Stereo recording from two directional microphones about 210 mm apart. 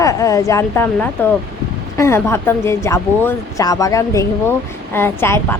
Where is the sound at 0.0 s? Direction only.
15° left (ahead or behind).